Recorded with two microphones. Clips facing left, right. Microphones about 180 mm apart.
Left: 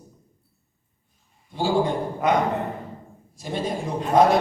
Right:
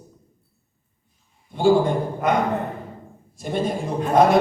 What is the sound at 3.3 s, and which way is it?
A man's voice, 55° right (ahead or behind).